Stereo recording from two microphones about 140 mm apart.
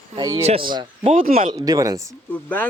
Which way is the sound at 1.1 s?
85° right.